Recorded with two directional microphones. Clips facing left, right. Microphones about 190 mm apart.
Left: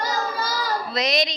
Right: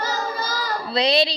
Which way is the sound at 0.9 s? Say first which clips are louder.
Right 6 dB; 30° right (ahead or behind).